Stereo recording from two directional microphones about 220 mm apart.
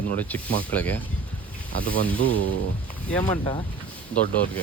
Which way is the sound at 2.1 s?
65° right (ahead or behind).